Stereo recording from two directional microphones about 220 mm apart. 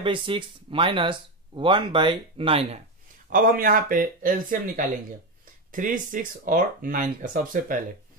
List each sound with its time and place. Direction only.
0.0 s speech: 25° right (ahead or behind)
3.3 s speech: 40° right (ahead or behind)